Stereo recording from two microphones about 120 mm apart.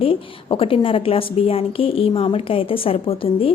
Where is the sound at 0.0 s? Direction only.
50° left (ahead or behind).